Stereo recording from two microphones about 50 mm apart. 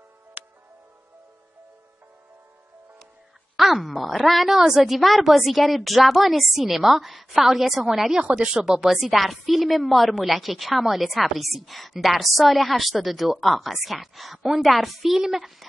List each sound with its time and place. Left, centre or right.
0.4 s music: right
3.5 s a woman's voice: centre
8.2 s speech: right
8.5 s a woman's voice: centre